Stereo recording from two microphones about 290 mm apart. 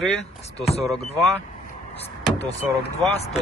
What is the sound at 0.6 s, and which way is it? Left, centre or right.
Speech, left.